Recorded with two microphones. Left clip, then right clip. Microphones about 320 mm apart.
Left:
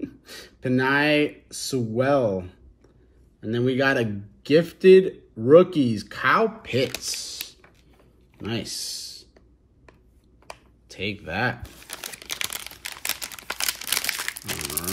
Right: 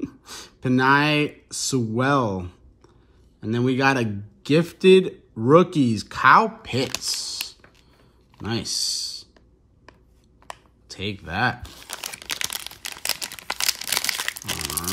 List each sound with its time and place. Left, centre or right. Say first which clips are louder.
0.0 s a man's voice: right 2 dB; centre
8.4 s a sound: right 4 dB; centre
10.4 s crumpling: right 3 dB; centre